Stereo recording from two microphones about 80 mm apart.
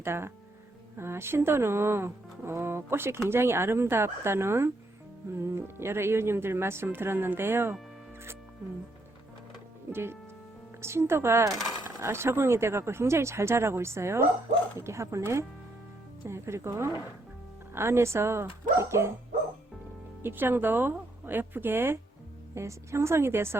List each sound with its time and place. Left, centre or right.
0.0 s speech: right
9.9 s speech: right
20.2 s a woman's voice: right